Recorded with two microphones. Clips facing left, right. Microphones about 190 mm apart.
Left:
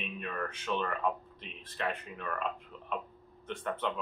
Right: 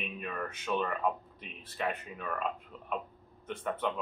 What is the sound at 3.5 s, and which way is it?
Speech, 10° right (ahead or behind).